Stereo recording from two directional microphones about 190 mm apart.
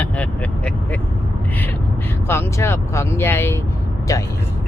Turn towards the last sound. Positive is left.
turn(degrees=15)  # may be behind; listen again after turning